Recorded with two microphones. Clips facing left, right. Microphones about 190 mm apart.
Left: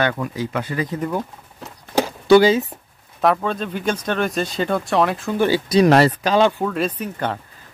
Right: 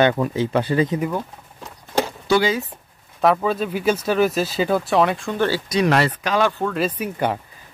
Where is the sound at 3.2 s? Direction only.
5° right (ahead or behind).